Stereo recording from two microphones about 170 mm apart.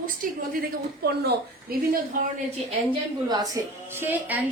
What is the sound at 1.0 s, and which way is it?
Speech, 70° right (ahead or behind).